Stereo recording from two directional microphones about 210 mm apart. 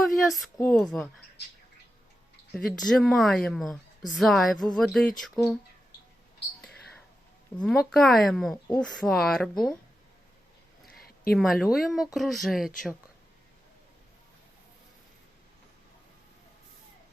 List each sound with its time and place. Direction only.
0.0 s a sound: centre (ahead or behind)
0.7 s a woman's voice: centre (ahead or behind)
2.5 s a woman's voice: centre (ahead or behind)
7.5 s a woman's voice: centre (ahead or behind)
10.8 s a sound: 45° left (ahead or behind)
11.3 s a woman's voice: centre (ahead or behind)